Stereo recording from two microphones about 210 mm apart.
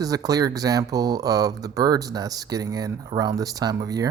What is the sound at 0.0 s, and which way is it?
Speech, 15° right (ahead or behind).